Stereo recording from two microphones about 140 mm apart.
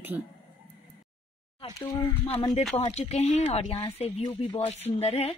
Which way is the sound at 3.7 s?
35° left (ahead or behind).